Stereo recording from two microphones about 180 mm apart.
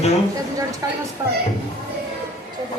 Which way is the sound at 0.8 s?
20° right (ahead or behind).